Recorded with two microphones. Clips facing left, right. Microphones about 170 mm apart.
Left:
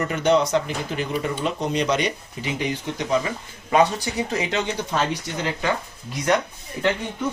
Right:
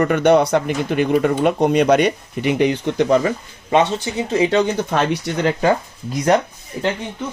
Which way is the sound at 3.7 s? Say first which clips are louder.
Right 2 dB; 25° right (ahead or behind).